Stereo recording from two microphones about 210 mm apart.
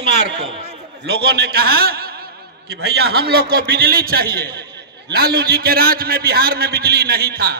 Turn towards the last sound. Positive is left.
turn(degrees=-45)  # may be behind; listen again after turning